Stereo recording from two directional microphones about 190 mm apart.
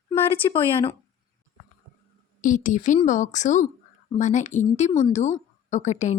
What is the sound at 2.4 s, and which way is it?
A woman's voice, 40° left (ahead or behind).